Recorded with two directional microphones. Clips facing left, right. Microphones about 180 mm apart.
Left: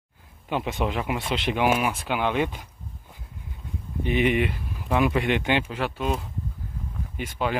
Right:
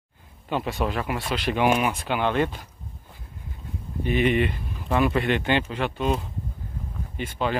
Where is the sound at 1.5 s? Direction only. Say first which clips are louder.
Right 2 dB; 10° left (ahead or behind).